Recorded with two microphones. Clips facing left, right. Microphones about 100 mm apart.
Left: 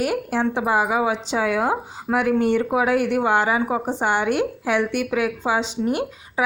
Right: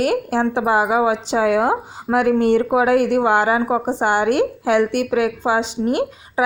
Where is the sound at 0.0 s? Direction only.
65° right (ahead or behind).